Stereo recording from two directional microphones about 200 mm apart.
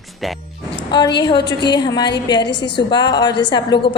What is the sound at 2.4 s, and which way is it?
Speech, 60° left (ahead or behind).